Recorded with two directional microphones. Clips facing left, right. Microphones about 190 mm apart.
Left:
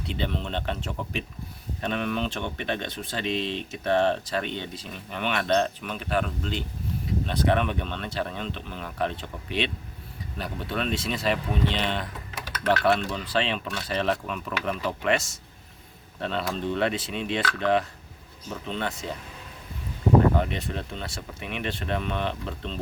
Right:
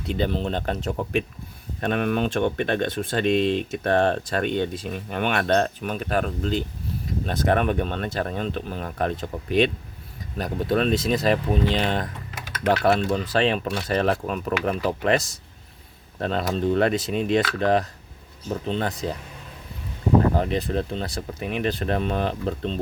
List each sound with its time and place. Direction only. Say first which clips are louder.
0.1 s speech: right 6 dB; 40° right (ahead or behind)
1.8 s speech: right 5 dB; 50° right (ahead or behind)
20.3 s speech: right 4 dB; 35° right (ahead or behind)